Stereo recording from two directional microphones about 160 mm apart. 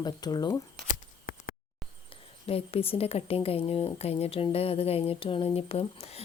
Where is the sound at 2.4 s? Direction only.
35° left (ahead or behind).